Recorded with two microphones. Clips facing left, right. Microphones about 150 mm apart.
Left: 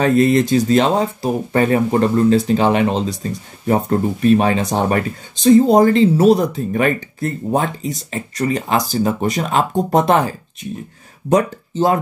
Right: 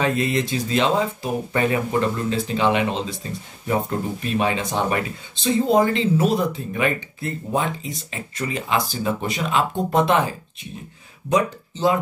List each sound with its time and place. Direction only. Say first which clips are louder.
0.0 s speech: left 8 dB; 40° left (ahead or behind)